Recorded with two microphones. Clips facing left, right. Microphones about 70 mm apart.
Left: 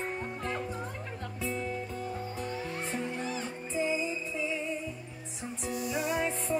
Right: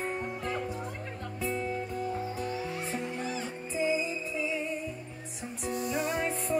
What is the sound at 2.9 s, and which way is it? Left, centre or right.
Music, left.